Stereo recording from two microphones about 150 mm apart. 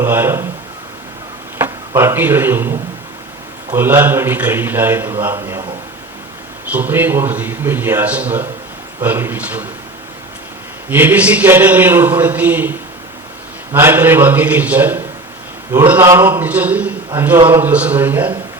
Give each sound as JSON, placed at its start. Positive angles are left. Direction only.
{"t": 0.0, "sound": "a man's voice", "side_deg": -15}
{"t": 1.5, "sound": "a man's voice", "side_deg": -15}
{"t": 6.7, "sound": "a man's voice", "side_deg": -10}
{"t": 10.8, "sound": "a man's voice", "side_deg": -10}
{"t": 13.7, "sound": "a man's voice", "side_deg": -15}